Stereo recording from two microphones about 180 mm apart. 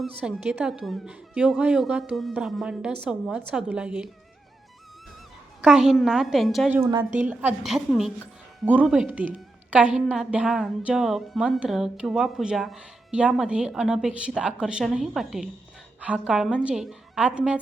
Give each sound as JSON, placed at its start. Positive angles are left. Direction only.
{"t": 0.0, "sound": "a woman's voice", "side_deg": -5}
{"t": 5.6, "sound": "a woman's voice", "side_deg": -5}
{"t": 6.7, "sound": "a woman's voice", "side_deg": -20}